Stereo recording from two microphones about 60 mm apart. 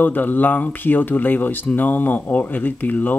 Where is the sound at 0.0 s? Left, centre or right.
Left.